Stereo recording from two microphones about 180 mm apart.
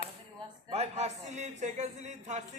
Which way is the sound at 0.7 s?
35° right (ahead or behind).